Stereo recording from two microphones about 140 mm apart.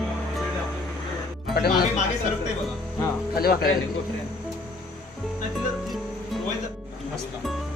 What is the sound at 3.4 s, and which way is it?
Speech, 90° left.